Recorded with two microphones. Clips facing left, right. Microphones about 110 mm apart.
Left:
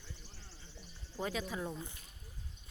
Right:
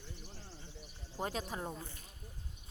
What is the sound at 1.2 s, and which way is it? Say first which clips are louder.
Speech: left 1 dB; 40° right (ahead or behind).